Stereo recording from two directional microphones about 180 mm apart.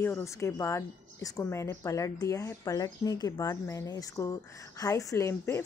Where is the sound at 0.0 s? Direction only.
15° left (ahead or behind).